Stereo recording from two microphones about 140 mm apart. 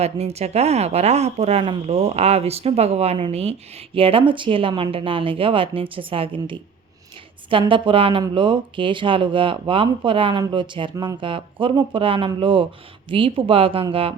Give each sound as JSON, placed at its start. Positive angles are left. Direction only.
{"t": 0.0, "sound": "speech", "side_deg": -50}
{"t": 7.7, "sound": "speech", "side_deg": -40}
{"t": 10.9, "sound": "speech", "side_deg": -25}
{"t": 11.2, "sound": "speech", "side_deg": -35}